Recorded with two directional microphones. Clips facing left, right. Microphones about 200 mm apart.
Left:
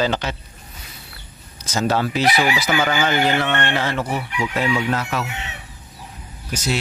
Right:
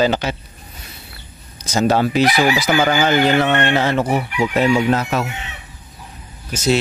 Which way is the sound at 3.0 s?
20° right (ahead or behind).